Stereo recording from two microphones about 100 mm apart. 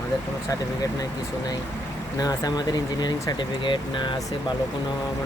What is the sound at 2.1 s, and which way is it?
Speech, 40° left (ahead or behind).